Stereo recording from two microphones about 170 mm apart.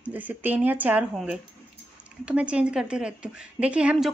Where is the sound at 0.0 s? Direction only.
10° right (ahead or behind).